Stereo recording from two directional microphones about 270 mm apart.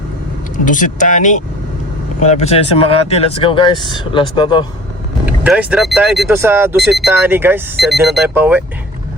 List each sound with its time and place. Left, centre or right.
0.5 s speech: left
5.2 s speech: centre